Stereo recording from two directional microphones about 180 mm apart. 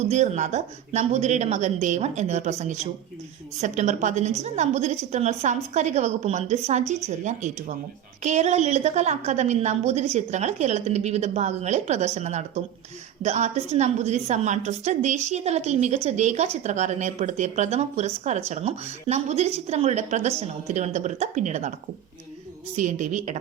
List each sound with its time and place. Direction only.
0.0 s a woman's voice: 40° right (ahead or behind)
22.7 s a woman's voice: 40° right (ahead or behind)